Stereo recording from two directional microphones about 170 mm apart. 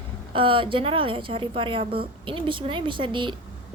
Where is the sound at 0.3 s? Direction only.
30° right (ahead or behind).